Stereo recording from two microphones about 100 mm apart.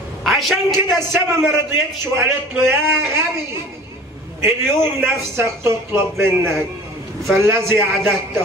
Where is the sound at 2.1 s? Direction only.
25° right (ahead or behind).